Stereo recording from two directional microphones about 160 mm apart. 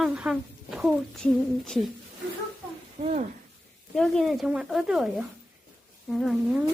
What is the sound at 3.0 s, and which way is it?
Speech, 45° right (ahead or behind).